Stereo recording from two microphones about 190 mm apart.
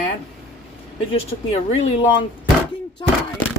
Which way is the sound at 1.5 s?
30° left (ahead or behind).